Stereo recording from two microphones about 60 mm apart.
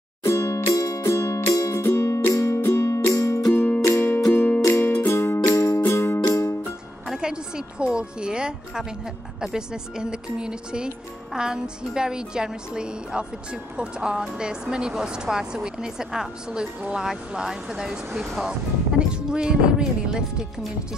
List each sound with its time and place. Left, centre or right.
0.2 s music: left
0.7 s music: left
1.8 s music: left
3.5 s music: left
5.5 s music: left
5.8 s music: left
7.1 s music: centre
9.4 s a woman's voice: centre
18.9 s a woman's voice: centre